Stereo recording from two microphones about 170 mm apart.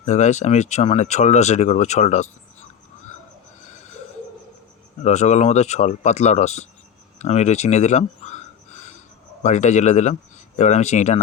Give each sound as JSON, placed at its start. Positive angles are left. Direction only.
{"t": 0.0, "sound": "speech", "side_deg": 45}
{"t": 5.0, "sound": "speech", "side_deg": 40}
{"t": 7.2, "sound": "a sound", "side_deg": 40}
{"t": 9.4, "sound": "speech", "side_deg": 45}